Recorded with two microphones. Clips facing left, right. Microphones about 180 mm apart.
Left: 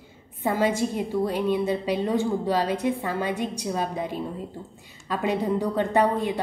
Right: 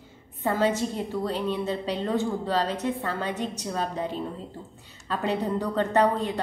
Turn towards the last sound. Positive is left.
turn(degrees=10)  # may be behind; listen again after turning